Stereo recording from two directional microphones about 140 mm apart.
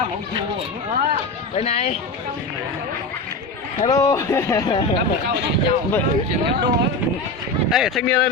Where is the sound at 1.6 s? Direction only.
45° left (ahead or behind).